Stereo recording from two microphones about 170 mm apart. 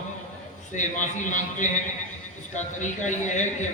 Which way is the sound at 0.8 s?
45° left (ahead or behind).